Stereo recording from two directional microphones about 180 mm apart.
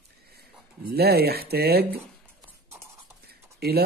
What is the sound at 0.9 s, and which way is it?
Speech, 60° right (ahead or behind).